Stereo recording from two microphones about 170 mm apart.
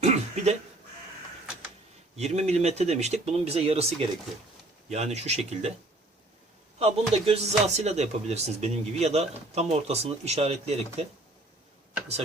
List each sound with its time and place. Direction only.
0.0 s a sound: 40° right (ahead or behind)
2.1 s speech: 40° right (ahead or behind)
6.7 s speech: 35° right (ahead or behind)